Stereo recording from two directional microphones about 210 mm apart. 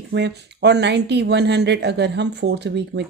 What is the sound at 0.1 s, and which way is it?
Speech, 55° right (ahead or behind).